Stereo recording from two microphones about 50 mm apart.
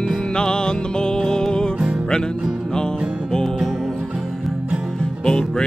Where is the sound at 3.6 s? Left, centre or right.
Centre.